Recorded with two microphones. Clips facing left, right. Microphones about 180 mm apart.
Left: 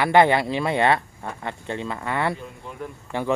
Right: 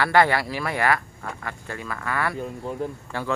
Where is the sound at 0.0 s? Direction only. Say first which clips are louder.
Left 3 dB; 20° left (ahead or behind).